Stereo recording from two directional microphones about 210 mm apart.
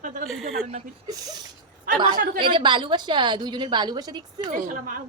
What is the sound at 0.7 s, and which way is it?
Speech, 20° right (ahead or behind).